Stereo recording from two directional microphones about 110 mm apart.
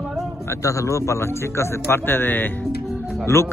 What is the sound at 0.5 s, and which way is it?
A man's voice, 30° left (ahead or behind).